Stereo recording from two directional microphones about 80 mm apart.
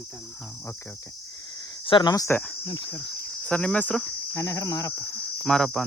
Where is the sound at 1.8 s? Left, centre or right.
Left.